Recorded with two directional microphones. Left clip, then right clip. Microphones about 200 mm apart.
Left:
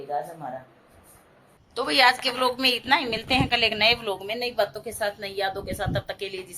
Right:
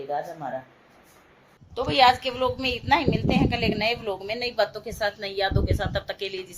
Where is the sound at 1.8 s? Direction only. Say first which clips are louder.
Right 1 dB; 5° right (ahead or behind).